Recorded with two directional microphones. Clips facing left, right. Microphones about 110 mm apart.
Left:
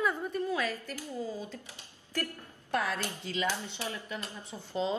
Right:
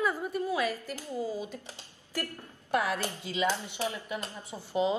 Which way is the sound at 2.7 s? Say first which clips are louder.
Right 3 dB; 15° right (ahead or behind).